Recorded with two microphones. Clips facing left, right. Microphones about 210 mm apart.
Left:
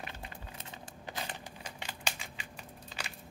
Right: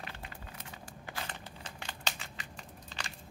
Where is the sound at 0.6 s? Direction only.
20° left (ahead or behind).